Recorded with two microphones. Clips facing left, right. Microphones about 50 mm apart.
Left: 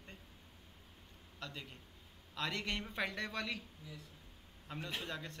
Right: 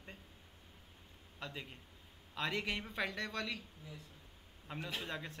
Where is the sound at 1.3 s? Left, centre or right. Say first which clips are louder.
Right 1 dB; centre.